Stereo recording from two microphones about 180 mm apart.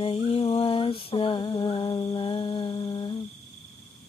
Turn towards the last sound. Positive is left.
turn(degrees=25)  # may be behind; listen again after turning